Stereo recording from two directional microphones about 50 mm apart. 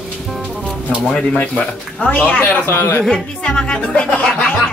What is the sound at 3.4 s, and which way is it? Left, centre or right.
Speech, centre.